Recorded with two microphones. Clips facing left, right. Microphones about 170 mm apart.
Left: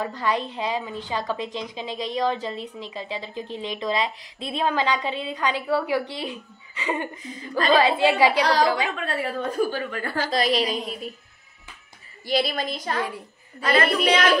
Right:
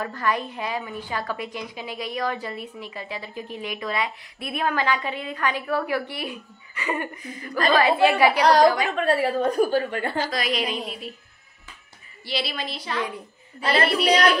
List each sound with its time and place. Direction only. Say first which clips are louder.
0.0 s a woman's voice: left 1 dB; 15° left (ahead or behind)
8.9 s a child's voice: right 6 dB; 40° right (ahead or behind)
9.8 s a child's voice: right 3 dB; 30° right (ahead or behind)
10.3 s a woman's voice: left 4 dB; 35° left (ahead or behind)
12.3 s a woman's voice: left 5 dB; 45° left (ahead or behind)
13.6 s a child's voice: left 1 dB; 35° right (ahead or behind)